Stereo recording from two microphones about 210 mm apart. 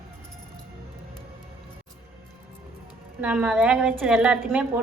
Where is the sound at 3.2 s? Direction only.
5° right (ahead or behind).